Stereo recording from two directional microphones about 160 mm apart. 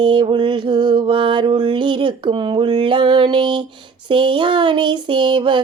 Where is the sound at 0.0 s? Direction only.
30° right (ahead or behind).